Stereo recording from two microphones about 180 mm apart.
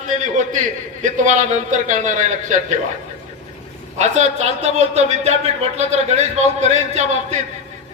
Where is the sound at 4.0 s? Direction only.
40° right (ahead or behind).